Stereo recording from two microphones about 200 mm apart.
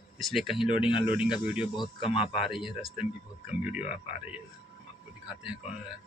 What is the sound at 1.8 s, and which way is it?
Speech, 25° left (ahead or behind).